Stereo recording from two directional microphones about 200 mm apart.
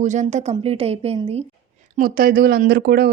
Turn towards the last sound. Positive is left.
turn(degrees=-50)  # may be behind; listen again after turning